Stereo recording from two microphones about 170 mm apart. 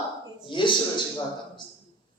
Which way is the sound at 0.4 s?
30° left (ahead or behind).